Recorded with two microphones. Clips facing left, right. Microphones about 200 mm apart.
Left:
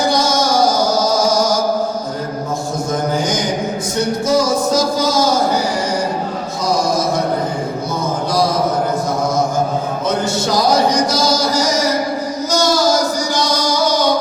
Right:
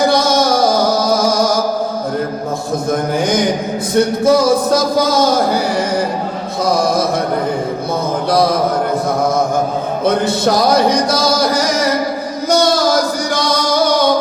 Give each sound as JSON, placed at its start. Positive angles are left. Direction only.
{"t": 4.3, "sound": "a sound", "side_deg": -60}
{"t": 10.0, "sound": "music", "side_deg": -55}
{"t": 12.5, "sound": "female singing", "side_deg": -60}
{"t": 13.3, "sound": "music", "side_deg": -55}